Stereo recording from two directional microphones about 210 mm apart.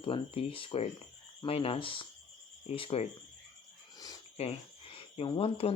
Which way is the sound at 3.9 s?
20° left (ahead or behind).